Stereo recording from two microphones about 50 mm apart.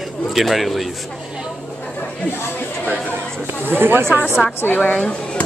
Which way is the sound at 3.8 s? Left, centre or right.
Right.